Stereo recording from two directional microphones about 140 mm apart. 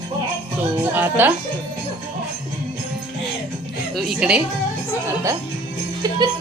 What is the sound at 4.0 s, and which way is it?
Speech, 5° right (ahead or behind).